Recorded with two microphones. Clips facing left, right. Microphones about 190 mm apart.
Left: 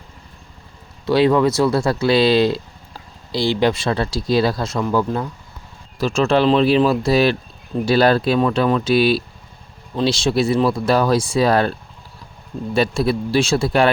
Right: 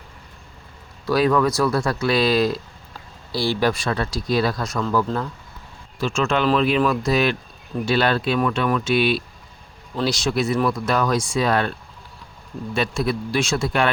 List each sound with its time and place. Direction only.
1.0 s speech: 25° left (ahead or behind)
6.0 s speech: 35° left (ahead or behind)
12.7 s speech: 35° left (ahead or behind)